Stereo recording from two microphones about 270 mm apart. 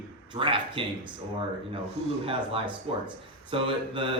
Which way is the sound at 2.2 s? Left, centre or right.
Centre.